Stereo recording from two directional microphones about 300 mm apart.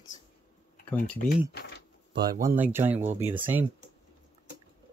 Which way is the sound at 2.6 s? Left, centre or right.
Centre.